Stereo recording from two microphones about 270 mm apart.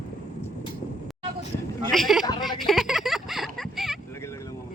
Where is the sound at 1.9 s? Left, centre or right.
Centre.